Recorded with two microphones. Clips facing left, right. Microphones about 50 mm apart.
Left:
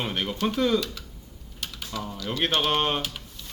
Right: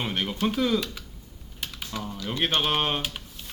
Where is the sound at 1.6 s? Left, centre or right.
Centre.